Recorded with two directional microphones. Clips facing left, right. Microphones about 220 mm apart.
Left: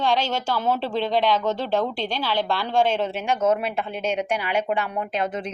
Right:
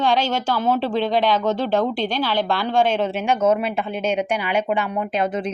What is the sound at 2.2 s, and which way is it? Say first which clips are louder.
A woman's voice: right 1 dB; centre (ahead or behind).